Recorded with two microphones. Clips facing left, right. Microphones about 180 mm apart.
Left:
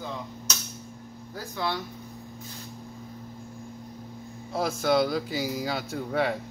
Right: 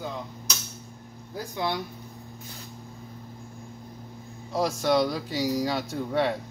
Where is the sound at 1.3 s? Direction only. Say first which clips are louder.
Right 2 dB; 15° right (ahead or behind).